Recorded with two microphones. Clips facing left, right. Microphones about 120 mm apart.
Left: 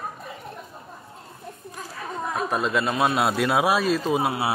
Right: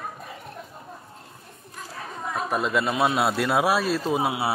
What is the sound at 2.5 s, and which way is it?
A man's voice, 5° right (ahead or behind).